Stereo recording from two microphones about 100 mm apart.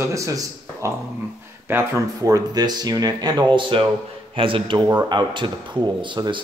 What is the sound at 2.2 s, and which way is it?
A man's voice, 40° right (ahead or behind).